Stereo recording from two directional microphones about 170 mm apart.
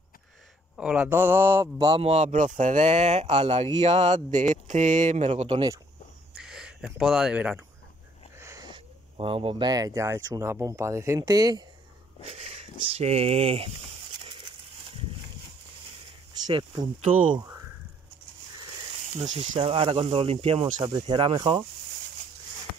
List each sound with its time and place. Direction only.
0.7 s a man's voice: 5° right (ahead or behind)
2.0 s speech: 40° right (ahead or behind)
6.3 s a sound: 5° right (ahead or behind)
7.0 s speech: centre (ahead or behind)
8.4 s speech: 20° right (ahead or behind)
12.3 s speech: 40° right (ahead or behind)
16.4 s speech: 25° right (ahead or behind)
19.3 s speech: 45° right (ahead or behind)
19.6 s speech: 30° right (ahead or behind)
20.8 s speech: 25° right (ahead or behind)